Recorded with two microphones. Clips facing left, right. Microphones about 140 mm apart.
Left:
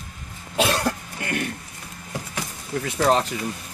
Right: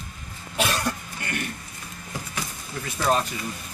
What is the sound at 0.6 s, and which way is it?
Cough, 90° left.